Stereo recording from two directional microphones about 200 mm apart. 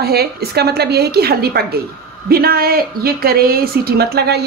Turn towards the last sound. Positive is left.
turn(degrees=-55)  # may be behind; listen again after turning